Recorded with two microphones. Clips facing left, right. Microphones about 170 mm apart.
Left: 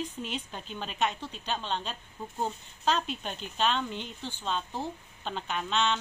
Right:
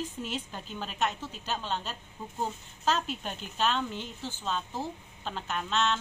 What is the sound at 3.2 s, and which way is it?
A woman's voice, 5° right (ahead or behind).